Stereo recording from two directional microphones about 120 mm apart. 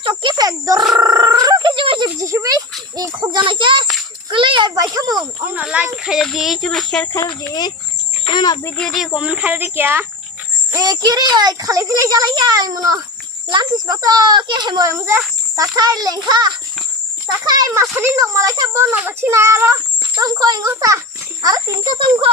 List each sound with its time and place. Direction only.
0.0 s a child's voice: 40° right (ahead or behind)
0.9 s a sound: 30° right (ahead or behind)
2.0 s a child's voice: 25° right (ahead or behind)
3.3 s a sound: 45° right (ahead or behind)
4.7 s speech: 30° right (ahead or behind)
5.4 s speech: 15° right (ahead or behind); by 7.0 s 5° left (ahead or behind)
7.1 s a child's voice: 35° left (ahead or behind)
8.8 s speech: 5° left (ahead or behind)
9.1 s a child's voice: 10° right (ahead or behind); by 14.8 s 40° right (ahead or behind)
14.8 s a child's voice: 25° right (ahead or behind)
17.9 s a child's voice: 25° right (ahead or behind)
21.9 s speech: 45° right (ahead or behind)